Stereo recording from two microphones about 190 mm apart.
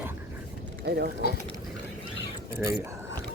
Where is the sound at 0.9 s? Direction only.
60° right (ahead or behind).